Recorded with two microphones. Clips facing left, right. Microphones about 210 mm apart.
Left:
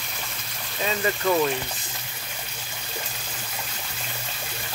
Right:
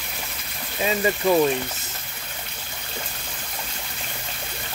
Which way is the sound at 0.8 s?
20° right (ahead or behind).